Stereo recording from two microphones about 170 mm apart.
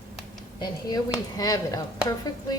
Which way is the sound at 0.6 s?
20° left (ahead or behind).